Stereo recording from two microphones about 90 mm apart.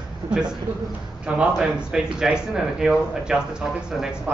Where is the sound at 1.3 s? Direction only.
10° right (ahead or behind).